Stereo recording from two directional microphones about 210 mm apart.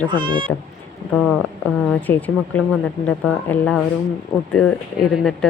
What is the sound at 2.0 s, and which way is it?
A woman's voice, 10° left (ahead or behind).